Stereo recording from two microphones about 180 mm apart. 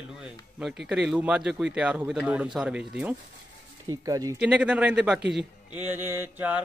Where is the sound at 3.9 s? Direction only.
20° right (ahead or behind).